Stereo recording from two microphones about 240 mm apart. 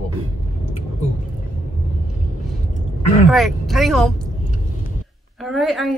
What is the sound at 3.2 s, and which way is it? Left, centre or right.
Speech, centre.